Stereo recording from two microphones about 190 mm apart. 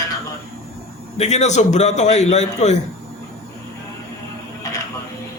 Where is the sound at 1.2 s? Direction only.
35° left (ahead or behind).